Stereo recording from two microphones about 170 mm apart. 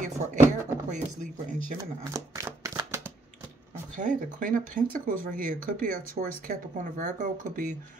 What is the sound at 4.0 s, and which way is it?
Speech, 50° right (ahead or behind).